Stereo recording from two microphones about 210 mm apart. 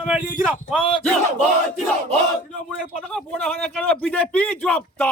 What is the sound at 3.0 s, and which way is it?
A man's voice, 5° left (ahead or behind).